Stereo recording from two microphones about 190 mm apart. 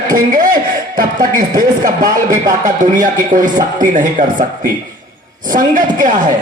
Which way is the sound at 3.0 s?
45° right (ahead or behind).